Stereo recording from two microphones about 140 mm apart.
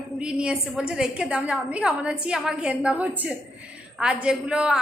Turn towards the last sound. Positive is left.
turn(degrees=-5)  # may be behind; listen again after turning